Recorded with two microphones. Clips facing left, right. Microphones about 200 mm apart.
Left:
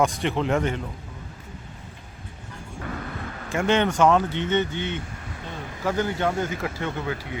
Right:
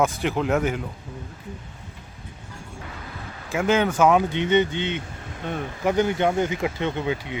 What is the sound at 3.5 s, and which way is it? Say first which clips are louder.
A man's voice: right 1 dB; 5° right (ahead or behind).